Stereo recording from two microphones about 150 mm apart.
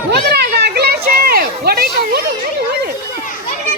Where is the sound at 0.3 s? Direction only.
90° right.